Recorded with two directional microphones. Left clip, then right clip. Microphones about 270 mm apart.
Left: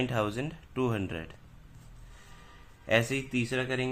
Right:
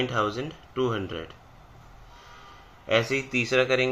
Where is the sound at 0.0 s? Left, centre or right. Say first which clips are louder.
Right 4 dB; centre.